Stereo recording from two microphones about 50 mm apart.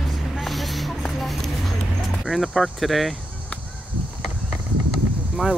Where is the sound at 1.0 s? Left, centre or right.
Centre.